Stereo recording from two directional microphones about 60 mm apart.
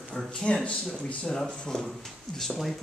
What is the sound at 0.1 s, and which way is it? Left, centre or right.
A man's voice, centre.